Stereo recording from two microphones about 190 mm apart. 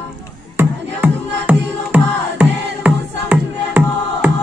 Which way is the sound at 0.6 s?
10° right (ahead or behind).